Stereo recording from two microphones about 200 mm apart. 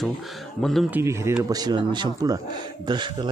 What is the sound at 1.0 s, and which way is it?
Speech, 15° right (ahead or behind).